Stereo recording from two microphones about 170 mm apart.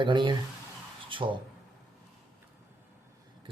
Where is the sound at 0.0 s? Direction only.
25° right (ahead or behind).